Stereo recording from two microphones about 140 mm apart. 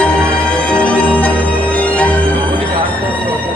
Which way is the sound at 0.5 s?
10° left (ahead or behind).